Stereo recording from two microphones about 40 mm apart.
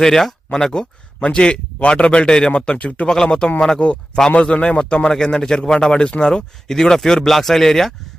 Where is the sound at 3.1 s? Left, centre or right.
Centre.